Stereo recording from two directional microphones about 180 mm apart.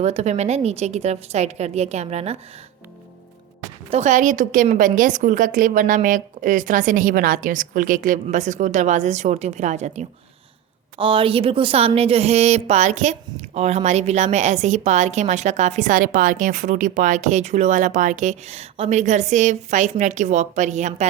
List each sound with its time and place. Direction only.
0.0 s a woman's voice: 40° right (ahead or behind)
3.8 s a woman's voice: 40° right (ahead or behind)
10.9 s a woman's voice: 30° right (ahead or behind)